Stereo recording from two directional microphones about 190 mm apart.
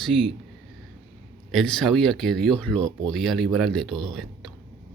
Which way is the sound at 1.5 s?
Centre (ahead or behind).